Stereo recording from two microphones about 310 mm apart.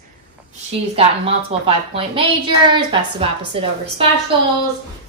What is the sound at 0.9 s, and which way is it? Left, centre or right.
A woman's voice, centre.